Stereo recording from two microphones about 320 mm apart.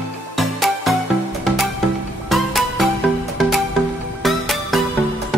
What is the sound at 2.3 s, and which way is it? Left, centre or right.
Music, centre.